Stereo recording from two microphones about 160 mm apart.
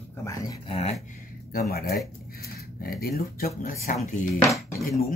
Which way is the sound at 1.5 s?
70° left (ahead or behind).